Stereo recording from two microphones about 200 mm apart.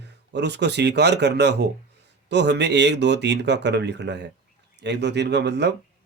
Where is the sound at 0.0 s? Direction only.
60° right (ahead or behind).